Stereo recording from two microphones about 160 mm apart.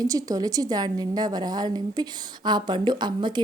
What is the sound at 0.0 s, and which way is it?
A woman's voice, 20° right (ahead or behind).